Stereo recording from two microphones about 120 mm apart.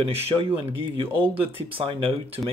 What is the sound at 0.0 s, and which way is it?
Speech, 50° right (ahead or behind).